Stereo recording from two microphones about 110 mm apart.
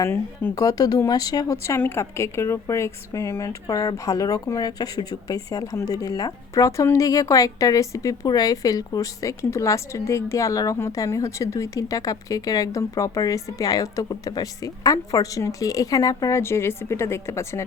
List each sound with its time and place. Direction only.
0.0 s speech: 20° left (ahead or behind)
0.5 s a woman's voice: 35° left (ahead or behind)